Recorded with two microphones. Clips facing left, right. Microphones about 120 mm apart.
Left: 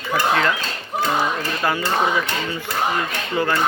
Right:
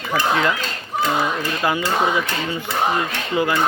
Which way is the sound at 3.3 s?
15° right (ahead or behind).